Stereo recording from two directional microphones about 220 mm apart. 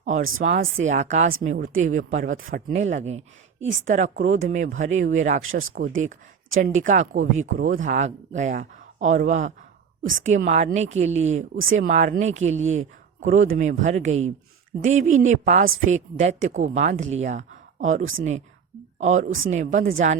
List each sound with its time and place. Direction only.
0.0 s a woman's voice: 30° right (ahead or behind)
5.4 s speech: 65° right (ahead or behind)
6.6 s a woman's voice: 35° right (ahead or behind)